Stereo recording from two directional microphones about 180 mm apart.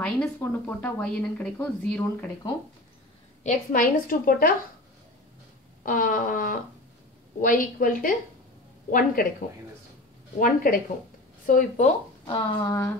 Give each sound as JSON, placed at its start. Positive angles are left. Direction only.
{"t": 0.0, "sound": "speech", "side_deg": 10}
{"t": 3.4, "sound": "a woman's voice", "side_deg": 50}
{"t": 5.9, "sound": "a woman's voice", "side_deg": 50}
{"t": 10.4, "sound": "a woman's voice", "side_deg": 50}